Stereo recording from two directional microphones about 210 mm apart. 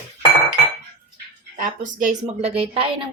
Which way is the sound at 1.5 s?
40° right (ahead or behind).